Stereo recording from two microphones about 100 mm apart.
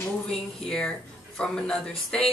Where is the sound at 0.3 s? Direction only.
5° left (ahead or behind).